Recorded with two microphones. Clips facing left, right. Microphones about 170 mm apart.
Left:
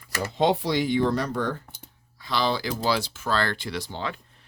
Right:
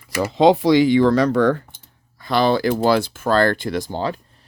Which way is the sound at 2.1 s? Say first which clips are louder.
Right 8 dB; 50° right (ahead or behind).